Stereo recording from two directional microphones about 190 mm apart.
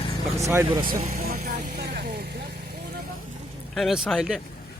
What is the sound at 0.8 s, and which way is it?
Vehicle, 40° right (ahead or behind).